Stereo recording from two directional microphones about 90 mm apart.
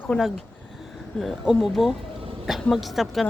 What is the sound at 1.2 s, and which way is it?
Speech, 5° left (ahead or behind).